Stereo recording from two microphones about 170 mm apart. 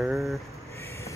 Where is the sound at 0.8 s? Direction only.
15° left (ahead or behind).